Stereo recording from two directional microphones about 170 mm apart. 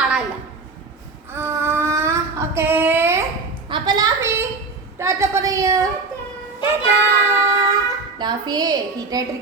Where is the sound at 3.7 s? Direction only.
25° right (ahead or behind).